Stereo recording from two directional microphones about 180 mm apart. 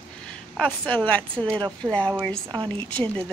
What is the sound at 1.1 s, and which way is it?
A woman's voice, 10° left (ahead or behind).